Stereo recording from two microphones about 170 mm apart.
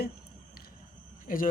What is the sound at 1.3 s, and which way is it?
Speech, 55° left (ahead or behind).